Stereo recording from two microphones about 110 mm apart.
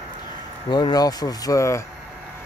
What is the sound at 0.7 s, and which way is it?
Speech, 40° left (ahead or behind).